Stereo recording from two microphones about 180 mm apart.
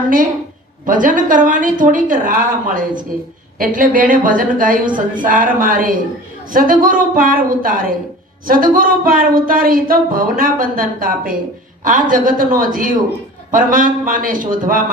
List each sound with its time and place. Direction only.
0.9 s speech: 50° right (ahead or behind)